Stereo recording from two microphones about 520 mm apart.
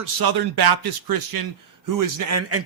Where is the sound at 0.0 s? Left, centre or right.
Right.